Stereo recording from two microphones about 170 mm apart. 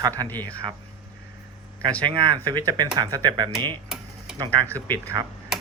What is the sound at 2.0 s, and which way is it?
Speech, 25° right (ahead or behind).